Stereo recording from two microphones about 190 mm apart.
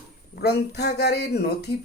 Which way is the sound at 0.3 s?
60° left (ahead or behind).